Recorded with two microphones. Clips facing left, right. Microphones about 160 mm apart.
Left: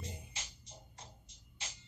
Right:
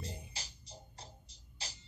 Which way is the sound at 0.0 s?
35° right (ahead or behind).